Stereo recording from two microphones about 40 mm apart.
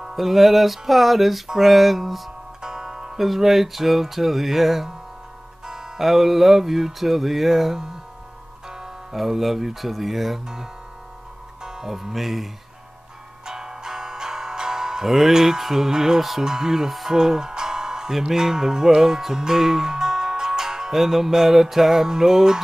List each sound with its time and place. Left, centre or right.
0.0 s speech: centre
2.6 s music: centre
3.3 s speech: centre
5.7 s music: centre
6.0 s speech: centre
11.6 s speech: centre
13.5 s music: centre